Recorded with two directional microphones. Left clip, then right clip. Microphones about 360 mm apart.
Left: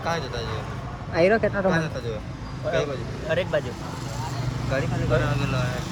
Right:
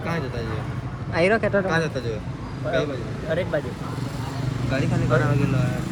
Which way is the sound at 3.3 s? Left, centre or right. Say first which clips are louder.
Left 1 dB; left.